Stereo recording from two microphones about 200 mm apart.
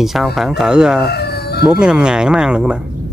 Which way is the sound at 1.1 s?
55° left (ahead or behind).